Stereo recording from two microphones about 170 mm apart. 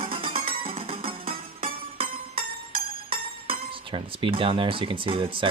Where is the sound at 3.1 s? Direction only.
30° right (ahead or behind).